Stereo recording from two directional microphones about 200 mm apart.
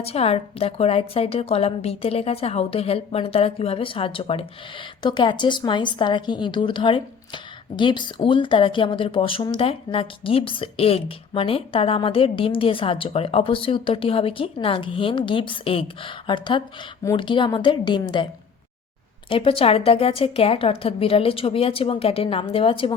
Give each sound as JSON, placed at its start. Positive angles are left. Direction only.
{"t": 0.0, "sound": "speech", "side_deg": 30}
{"t": 19.3, "sound": "speech", "side_deg": 25}